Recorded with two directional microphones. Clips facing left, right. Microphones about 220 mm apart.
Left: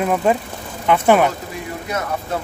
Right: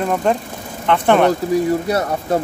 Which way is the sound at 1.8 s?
35° right (ahead or behind).